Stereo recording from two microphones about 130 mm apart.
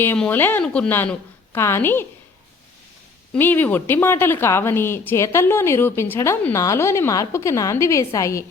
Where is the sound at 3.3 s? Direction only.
15° left (ahead or behind).